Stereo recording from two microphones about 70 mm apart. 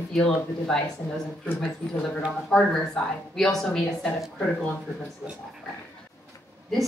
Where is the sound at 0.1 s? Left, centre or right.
Centre.